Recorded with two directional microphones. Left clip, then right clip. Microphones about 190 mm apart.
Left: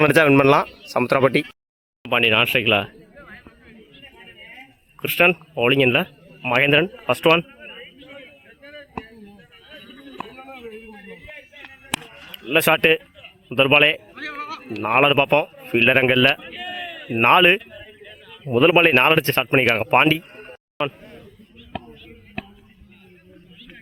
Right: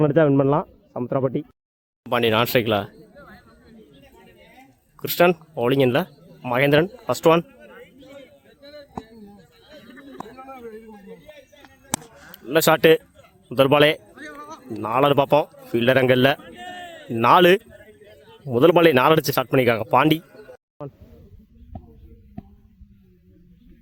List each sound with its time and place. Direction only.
0.0 s speech: 10° left (ahead or behind)
2.0 s speech: 15° right (ahead or behind)
4.0 s a sound: 10° left (ahead or behind)
5.0 s speech: 10° right (ahead or behind)
7.4 s a sound: 10° left (ahead or behind)
12.5 s speech: 5° right (ahead or behind)
14.3 s bleat: 50° right (ahead or behind)
14.8 s speech: 5° right (ahead or behind)
16.4 s a sound: 20° left (ahead or behind)
17.1 s speech: 10° right (ahead or behind)